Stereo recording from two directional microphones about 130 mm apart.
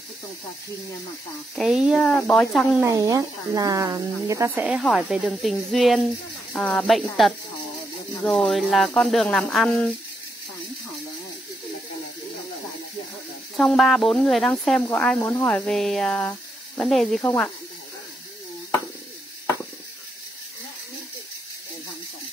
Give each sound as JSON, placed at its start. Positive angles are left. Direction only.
{"t": 1.5, "sound": "speech", "side_deg": 0}
{"t": 2.0, "sound": "speech", "side_deg": 10}
{"t": 2.8, "sound": "speech", "side_deg": -25}
{"t": 4.6, "sound": "speech", "side_deg": -5}
{"t": 13.6, "sound": "speech", "side_deg": 0}
{"t": 15.1, "sound": "speech", "side_deg": 20}
{"t": 15.4, "sound": "speech", "side_deg": 5}